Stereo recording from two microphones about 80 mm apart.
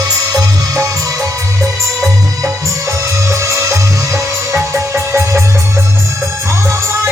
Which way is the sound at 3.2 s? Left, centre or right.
Right.